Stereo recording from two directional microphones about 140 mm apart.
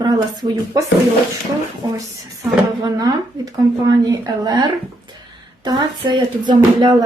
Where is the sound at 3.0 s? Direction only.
30° right (ahead or behind).